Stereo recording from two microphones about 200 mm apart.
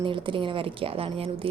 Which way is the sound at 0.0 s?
25° right (ahead or behind).